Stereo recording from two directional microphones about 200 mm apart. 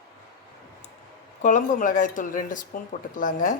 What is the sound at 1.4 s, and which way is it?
Speech, 40° left (ahead or behind).